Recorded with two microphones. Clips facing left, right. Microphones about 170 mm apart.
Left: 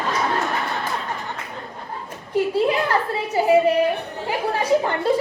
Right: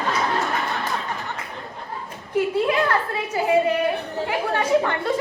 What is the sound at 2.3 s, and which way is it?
Speech, 30° left (ahead or behind).